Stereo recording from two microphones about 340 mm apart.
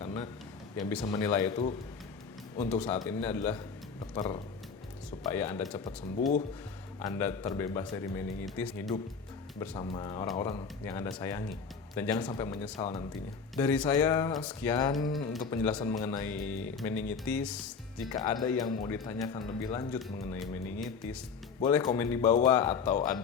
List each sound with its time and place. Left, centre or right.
0.0 s a sound: centre
1.0 s speech: centre
6.1 s speech: left
7.0 s speech: centre